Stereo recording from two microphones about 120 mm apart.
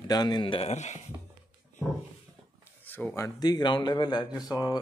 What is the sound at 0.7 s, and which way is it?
Speech, 75° left (ahead or behind).